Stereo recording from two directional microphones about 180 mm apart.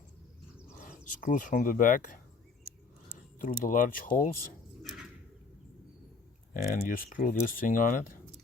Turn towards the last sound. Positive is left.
turn(degrees=50)  # may be behind; listen again after turning